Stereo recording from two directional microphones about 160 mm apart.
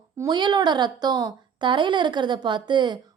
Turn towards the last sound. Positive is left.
turn(degrees=-30)  # may be behind; listen again after turning